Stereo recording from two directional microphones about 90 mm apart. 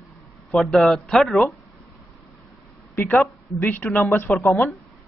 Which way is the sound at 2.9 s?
25° left (ahead or behind).